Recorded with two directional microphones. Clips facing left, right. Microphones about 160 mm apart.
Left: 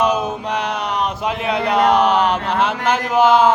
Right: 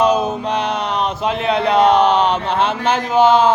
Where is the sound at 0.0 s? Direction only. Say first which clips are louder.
Right 3 dB; 30° right (ahead or behind).